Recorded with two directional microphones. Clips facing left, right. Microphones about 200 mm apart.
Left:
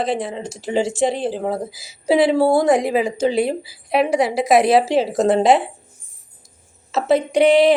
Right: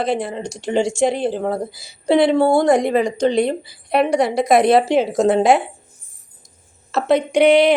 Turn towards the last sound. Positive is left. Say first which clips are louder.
# right 1 dB
turn(degrees=0)  # may be behind; listen again after turning